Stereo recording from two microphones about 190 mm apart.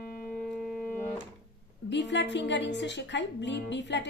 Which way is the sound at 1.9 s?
65° left (ahead or behind).